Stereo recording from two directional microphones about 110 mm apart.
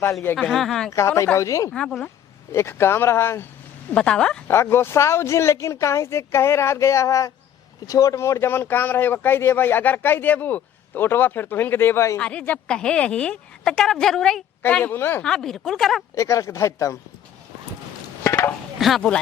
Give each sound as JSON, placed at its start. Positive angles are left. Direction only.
{"t": 0.0, "sound": "speech", "side_deg": 25}
{"t": 0.3, "sound": "speech", "side_deg": 0}
{"t": 0.9, "sound": "speech", "side_deg": 25}
{"t": 1.7, "sound": "a woman's voice", "side_deg": 10}
{"t": 2.5, "sound": "speech", "side_deg": 25}
{"t": 3.9, "sound": "a woman's voice", "side_deg": 10}
{"t": 4.4, "sound": "speech", "side_deg": 25}
{"t": 12.2, "sound": "a woman's voice", "side_deg": 10}
{"t": 15.2, "sound": "speech", "side_deg": 5}
{"t": 16.1, "sound": "speech", "side_deg": 30}
{"t": 18.2, "sound": "a sound", "side_deg": 20}
{"t": 18.8, "sound": "speech", "side_deg": 0}